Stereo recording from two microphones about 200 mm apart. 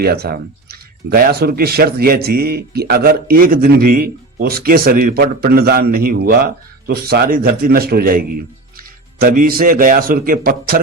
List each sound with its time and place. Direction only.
0.0 s speech: 50° right (ahead or behind)